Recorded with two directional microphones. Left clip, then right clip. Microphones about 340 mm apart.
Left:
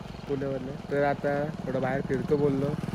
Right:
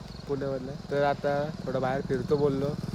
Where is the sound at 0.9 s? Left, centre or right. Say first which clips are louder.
Even; centre.